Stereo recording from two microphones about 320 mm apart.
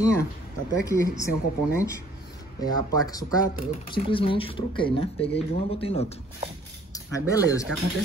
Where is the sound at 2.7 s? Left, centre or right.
Centre.